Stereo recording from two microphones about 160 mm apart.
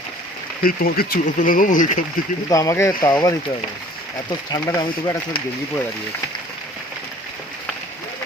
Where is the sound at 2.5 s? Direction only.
20° left (ahead or behind).